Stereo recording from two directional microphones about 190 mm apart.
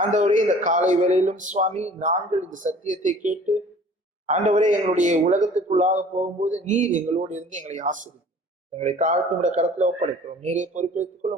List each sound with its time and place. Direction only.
0.0 s a man's voice: 40° right (ahead or behind)